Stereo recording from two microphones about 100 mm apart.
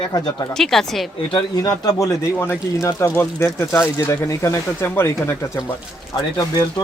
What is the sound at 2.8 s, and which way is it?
Speech, 20° left (ahead or behind).